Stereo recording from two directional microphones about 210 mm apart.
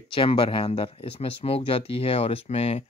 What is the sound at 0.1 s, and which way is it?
Speech, 25° left (ahead or behind).